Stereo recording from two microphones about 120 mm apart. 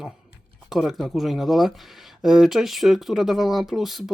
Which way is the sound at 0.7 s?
Centre (ahead or behind).